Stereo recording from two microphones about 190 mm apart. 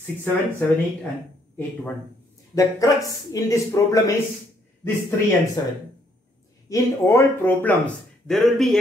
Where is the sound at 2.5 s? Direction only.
20° left (ahead or behind).